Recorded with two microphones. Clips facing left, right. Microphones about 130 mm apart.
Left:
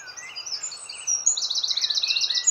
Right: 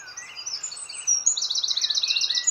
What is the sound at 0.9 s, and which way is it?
Bird vocalization, 40° right (ahead or behind).